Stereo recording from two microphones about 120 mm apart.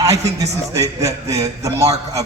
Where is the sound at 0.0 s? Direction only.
25° right (ahead or behind).